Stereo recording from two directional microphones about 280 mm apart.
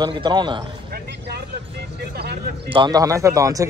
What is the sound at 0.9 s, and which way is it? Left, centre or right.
Speech, right.